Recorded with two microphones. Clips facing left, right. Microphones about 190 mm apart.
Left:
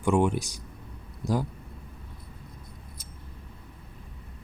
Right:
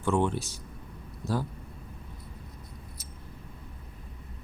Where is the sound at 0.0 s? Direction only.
10° left (ahead or behind).